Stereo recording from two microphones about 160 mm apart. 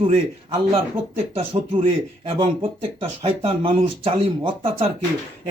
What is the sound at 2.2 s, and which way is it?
Speech, 35° right (ahead or behind).